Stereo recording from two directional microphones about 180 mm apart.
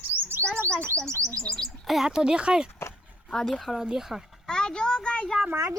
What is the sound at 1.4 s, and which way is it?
A child's voice, centre (ahead or behind).